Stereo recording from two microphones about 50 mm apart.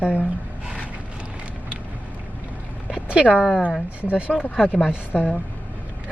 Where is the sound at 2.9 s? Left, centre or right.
Right.